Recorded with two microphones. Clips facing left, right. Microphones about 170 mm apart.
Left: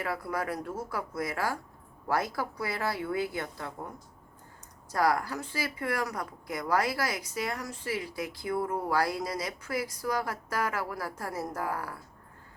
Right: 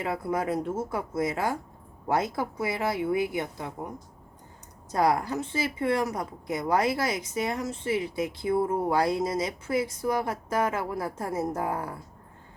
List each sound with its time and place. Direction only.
0.0 s speech: 20° right (ahead or behind)